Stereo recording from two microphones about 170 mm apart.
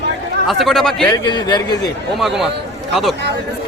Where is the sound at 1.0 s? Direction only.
20° left (ahead or behind).